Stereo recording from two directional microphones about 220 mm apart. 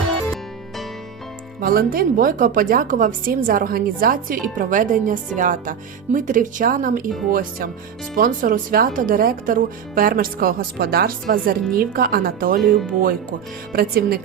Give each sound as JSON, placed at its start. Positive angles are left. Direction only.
{"t": 1.6, "sound": "a woman's voice", "side_deg": -40}
{"t": 12.6, "sound": "speech", "side_deg": 0}
{"t": 13.7, "sound": "speech", "side_deg": -45}